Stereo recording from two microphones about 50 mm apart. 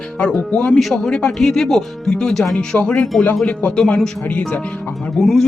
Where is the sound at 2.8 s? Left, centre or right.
Left.